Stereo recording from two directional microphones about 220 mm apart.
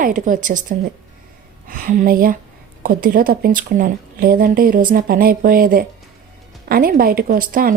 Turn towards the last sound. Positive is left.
turn(degrees=-40)  # may be behind; listen again after turning